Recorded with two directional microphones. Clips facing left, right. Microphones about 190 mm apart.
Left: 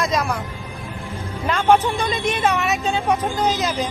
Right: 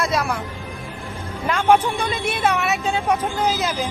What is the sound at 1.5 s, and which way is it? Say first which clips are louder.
A woman's voice: even; 10° right (ahead or behind).